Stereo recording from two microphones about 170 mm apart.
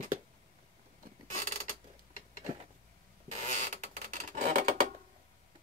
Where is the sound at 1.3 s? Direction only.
50° right (ahead or behind).